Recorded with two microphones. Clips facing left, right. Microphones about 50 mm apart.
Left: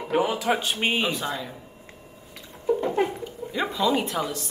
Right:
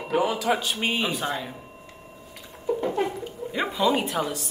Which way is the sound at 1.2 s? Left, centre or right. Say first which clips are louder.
Right 1 dB; right.